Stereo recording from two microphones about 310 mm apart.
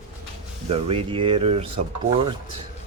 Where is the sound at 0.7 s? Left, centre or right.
Centre.